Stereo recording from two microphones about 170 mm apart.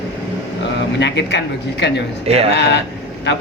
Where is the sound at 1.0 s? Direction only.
90° left.